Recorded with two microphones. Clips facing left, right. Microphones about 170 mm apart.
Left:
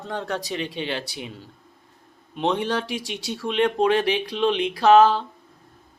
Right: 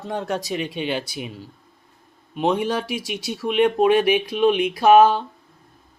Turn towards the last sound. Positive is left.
turn(degrees=-15)  # may be behind; listen again after turning